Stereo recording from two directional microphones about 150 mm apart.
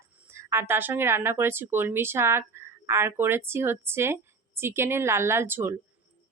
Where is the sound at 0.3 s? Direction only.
15° right (ahead or behind).